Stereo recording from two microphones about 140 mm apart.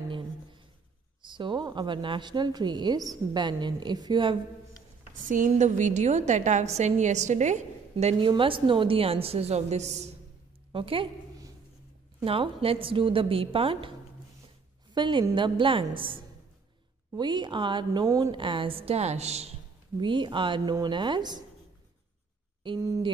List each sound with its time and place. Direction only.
1.2 s speech: 35° right (ahead or behind)
5.2 s a woman's voice: 65° right (ahead or behind); by 8.3 s 50° right (ahead or behind)
8.3 s a woman's voice: 40° right (ahead or behind); by 10.0 s 55° right (ahead or behind)
10.7 s a woman's voice: 40° right (ahead or behind)
12.3 s speech: 40° right (ahead or behind)
15.0 s speech: 35° right (ahead or behind)
18.3 s a woman's voice: 35° right (ahead or behind)
20.0 s speech: 35° right (ahead or behind)